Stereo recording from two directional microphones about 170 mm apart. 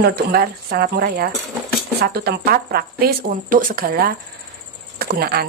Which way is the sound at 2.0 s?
65° right (ahead or behind).